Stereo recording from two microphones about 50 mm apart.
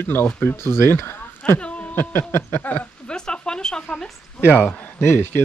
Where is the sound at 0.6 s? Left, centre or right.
Left.